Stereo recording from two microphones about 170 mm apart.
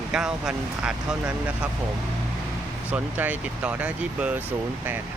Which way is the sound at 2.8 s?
10° right (ahead or behind).